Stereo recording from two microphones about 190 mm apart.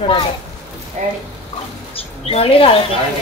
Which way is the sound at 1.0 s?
40° right (ahead or behind).